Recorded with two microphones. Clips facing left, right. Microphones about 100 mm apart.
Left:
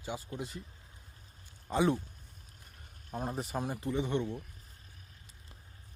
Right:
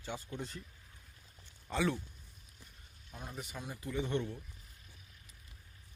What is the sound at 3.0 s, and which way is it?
Speech, 40° left (ahead or behind).